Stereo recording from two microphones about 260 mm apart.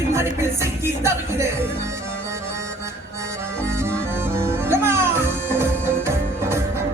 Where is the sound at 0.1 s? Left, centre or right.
Centre.